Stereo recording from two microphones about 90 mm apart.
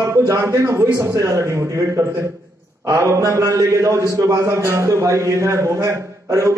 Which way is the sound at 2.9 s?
35° right (ahead or behind).